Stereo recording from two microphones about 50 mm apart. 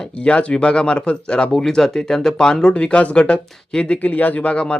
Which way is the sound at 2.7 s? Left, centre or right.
Left.